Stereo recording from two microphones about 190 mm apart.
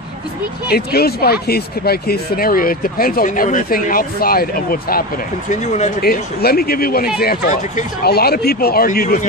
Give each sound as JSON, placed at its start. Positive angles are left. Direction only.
{"t": 0.7, "sound": "speech", "side_deg": 55}
{"t": 5.5, "sound": "speech", "side_deg": 40}
{"t": 6.0, "sound": "speech", "side_deg": 55}